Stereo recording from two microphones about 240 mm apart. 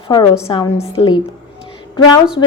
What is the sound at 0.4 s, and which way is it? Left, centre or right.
Speech, centre.